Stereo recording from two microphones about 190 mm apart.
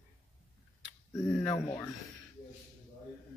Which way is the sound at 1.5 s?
15° left (ahead or behind).